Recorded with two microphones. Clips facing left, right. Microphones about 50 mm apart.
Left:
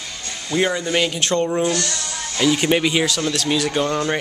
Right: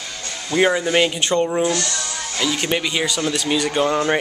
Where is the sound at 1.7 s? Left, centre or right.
Right.